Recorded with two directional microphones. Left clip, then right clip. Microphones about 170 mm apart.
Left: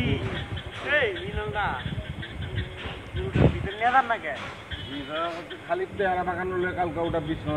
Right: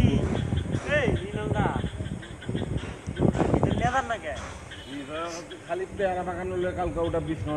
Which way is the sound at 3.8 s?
35° right (ahead or behind).